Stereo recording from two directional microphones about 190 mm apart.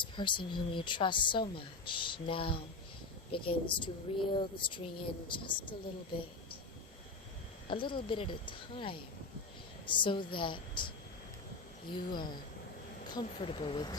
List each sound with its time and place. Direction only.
0.0 s a woman's voice: 25° left (ahead or behind)
7.7 s a woman's voice: 25° left (ahead or behind)